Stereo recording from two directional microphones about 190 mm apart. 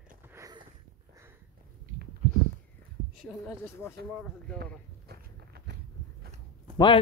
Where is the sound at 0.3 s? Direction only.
20° right (ahead or behind).